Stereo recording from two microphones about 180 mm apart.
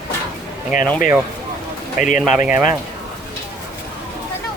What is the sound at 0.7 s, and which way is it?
Speech, 45° left (ahead or behind).